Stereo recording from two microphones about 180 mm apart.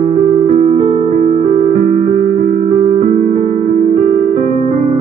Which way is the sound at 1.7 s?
45° right (ahead or behind).